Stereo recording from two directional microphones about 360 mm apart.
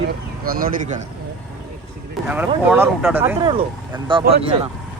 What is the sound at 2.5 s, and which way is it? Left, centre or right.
Speech, centre.